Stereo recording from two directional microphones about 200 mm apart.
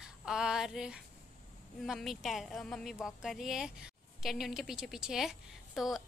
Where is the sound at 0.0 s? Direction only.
5° right (ahead or behind).